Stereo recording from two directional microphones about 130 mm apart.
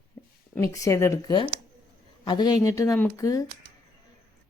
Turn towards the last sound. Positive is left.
turn(degrees=25)  # may be behind; listen again after turning